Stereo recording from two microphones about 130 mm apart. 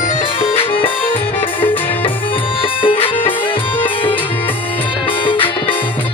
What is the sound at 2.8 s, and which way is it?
Music, 40° left (ahead or behind).